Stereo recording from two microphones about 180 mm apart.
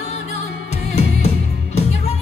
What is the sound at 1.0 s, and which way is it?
Music, 35° left (ahead or behind).